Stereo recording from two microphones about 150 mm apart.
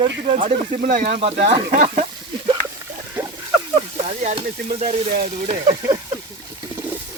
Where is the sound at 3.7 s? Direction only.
45° right (ahead or behind).